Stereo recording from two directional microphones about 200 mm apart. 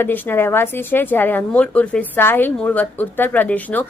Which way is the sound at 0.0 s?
10° left (ahead or behind).